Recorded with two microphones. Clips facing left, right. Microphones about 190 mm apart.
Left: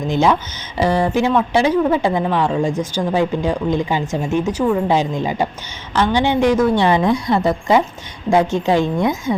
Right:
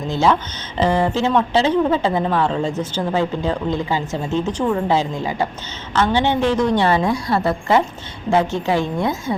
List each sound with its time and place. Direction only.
0.1 s a woman's voice: 15° left (ahead or behind)